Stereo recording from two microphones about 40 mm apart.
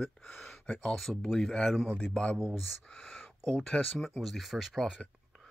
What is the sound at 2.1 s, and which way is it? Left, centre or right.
Speech, left.